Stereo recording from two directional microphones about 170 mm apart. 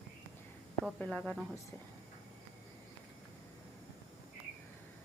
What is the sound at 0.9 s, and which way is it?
Speech, 5° left (ahead or behind).